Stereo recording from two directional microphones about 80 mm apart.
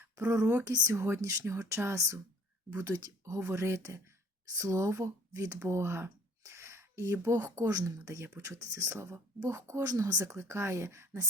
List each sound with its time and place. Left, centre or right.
0.3 s speech: right
0.6 s a woman's voice: right
0.9 s speech: right
3.3 s speech: right
7.6 s a woman's voice: right
10.2 s speech: right